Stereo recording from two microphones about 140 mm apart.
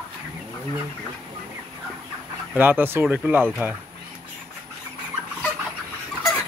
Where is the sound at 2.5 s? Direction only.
15° right (ahead or behind).